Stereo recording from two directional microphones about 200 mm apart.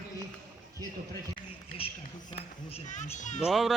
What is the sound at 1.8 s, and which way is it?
A child's voice, 30° left (ahead or behind).